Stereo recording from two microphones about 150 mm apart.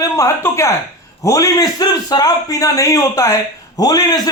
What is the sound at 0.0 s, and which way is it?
A man's voice, 20° left (ahead or behind).